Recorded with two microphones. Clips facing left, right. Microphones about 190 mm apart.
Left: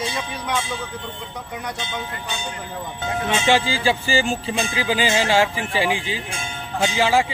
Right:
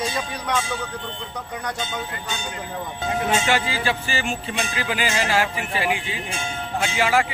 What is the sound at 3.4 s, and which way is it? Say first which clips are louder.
Speech: left 4 dB; 30° left (ahead or behind).